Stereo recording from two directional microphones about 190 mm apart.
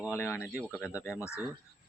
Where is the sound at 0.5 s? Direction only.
Centre (ahead or behind).